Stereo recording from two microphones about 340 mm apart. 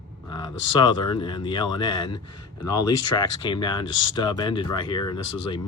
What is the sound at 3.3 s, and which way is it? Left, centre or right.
Speech, centre.